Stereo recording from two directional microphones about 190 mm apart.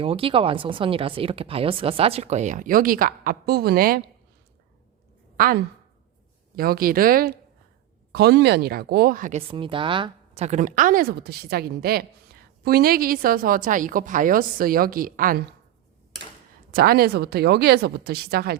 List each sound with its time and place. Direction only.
0.0 s speech: 30° right (ahead or behind); by 4.0 s 50° right (ahead or behind)
5.4 s a woman's voice: 50° right (ahead or behind)
8.1 s speech: 60° right (ahead or behind); by 9.4 s 45° right (ahead or behind)
9.5 s speech: 25° right (ahead or behind); by 15.4 s 45° right (ahead or behind)
16.7 s speech: 55° right (ahead or behind)